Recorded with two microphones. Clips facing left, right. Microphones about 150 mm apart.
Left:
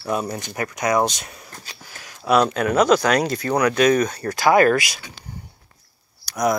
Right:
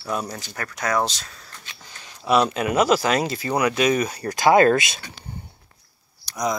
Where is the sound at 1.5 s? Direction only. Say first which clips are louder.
Left 3 dB; 35° left (ahead or behind).